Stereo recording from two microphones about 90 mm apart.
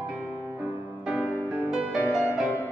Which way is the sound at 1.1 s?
20° right (ahead or behind).